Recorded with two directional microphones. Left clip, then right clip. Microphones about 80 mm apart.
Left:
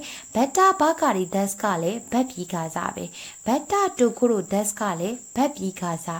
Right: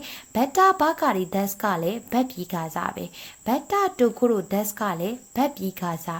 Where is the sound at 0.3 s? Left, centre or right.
Centre.